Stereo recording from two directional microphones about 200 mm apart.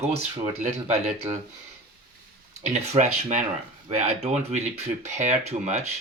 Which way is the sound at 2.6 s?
35° right (ahead or behind).